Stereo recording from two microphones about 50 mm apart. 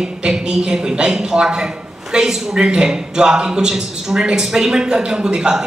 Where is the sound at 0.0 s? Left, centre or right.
Centre.